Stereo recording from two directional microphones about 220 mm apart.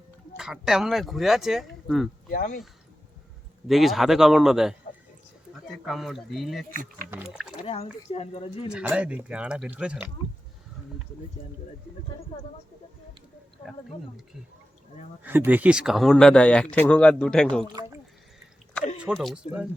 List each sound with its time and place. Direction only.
0.3 s speech: 5° right (ahead or behind)
2.3 s speech: 40° left (ahead or behind)
3.7 s speech: centre (ahead or behind)
5.8 s speech: centre (ahead or behind)
7.6 s speech: 30° left (ahead or behind)
8.7 s speech: 5° right (ahead or behind)
15.2 s speech: 10° right (ahead or behind)
18.9 s speech: centre (ahead or behind)